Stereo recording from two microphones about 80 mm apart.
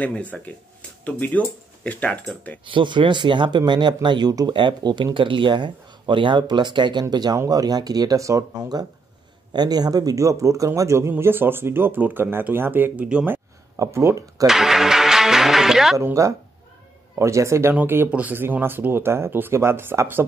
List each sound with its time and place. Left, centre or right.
0.0 s speech: centre
2.6 s speech: right
4.6 s a man's voice: right
13.7 s speech: right
14.4 s speech: centre
16.0 s a man's voice: right